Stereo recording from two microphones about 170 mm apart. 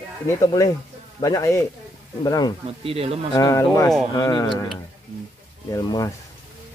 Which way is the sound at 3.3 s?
20° left (ahead or behind).